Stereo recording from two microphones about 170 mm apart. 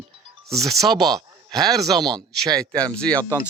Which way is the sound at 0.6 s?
Centre (ahead or behind).